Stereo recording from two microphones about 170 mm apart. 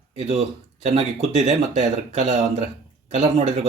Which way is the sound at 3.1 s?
40° right (ahead or behind).